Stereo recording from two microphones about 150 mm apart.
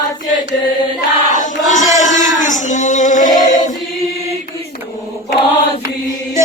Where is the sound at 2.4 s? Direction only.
55° left (ahead or behind).